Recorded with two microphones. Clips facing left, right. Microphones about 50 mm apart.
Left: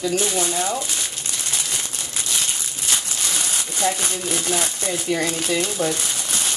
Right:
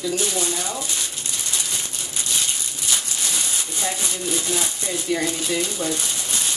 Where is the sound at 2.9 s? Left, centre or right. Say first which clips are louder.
Left 1 dB; left.